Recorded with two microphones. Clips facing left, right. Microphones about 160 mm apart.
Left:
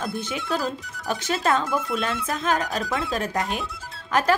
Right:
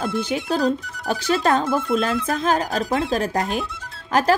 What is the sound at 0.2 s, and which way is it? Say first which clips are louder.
Speech: right 7 dB; 35° right (ahead or behind).